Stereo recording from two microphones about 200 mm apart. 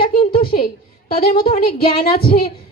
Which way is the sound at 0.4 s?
50° left (ahead or behind).